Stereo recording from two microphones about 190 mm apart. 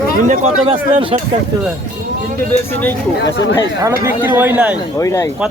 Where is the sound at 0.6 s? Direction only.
30° right (ahead or behind).